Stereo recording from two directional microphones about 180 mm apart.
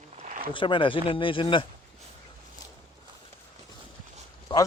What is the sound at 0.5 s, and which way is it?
Speech, 25° left (ahead or behind).